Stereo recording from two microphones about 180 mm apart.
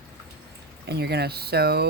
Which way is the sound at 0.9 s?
65° right (ahead or behind).